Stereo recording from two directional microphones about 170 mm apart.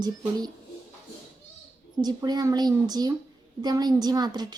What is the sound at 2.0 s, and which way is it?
A woman's voice, 25° right (ahead or behind).